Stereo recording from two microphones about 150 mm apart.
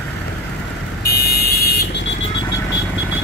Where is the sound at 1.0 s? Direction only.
90° left.